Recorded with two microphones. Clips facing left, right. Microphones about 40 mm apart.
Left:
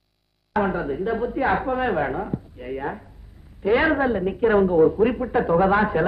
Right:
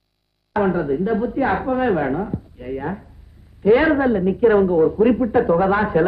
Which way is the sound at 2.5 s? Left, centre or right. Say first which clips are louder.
Right 3 dB; centre.